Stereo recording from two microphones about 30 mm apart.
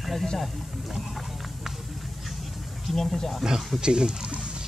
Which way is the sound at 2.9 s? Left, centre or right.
Centre.